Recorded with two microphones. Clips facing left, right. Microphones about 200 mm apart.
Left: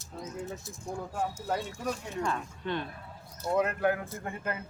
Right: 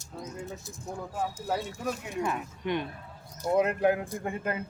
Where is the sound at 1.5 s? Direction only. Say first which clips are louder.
Right 2 dB; 5° right (ahead or behind).